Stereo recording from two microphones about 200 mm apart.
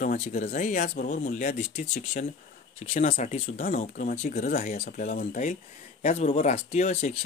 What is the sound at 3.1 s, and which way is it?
Speech, 40° left (ahead or behind).